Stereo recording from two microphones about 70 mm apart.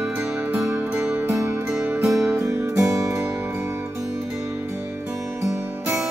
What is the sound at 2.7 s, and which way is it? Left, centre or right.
Music, right.